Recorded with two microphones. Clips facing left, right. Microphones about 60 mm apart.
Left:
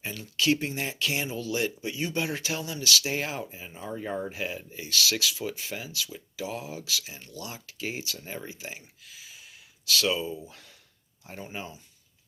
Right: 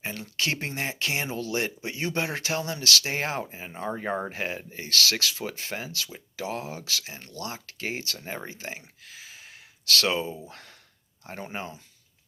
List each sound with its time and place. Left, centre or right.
0.0 s speech: right